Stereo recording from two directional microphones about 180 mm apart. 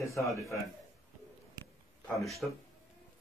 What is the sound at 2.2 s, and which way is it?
Speech, centre (ahead or behind).